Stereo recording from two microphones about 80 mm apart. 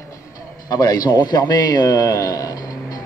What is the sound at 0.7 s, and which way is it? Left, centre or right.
A man's voice, left.